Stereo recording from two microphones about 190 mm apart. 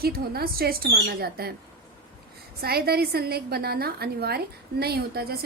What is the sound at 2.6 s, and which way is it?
A woman's voice, 55° right (ahead or behind).